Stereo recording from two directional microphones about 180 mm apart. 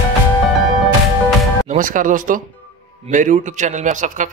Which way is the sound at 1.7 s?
50° right (ahead or behind).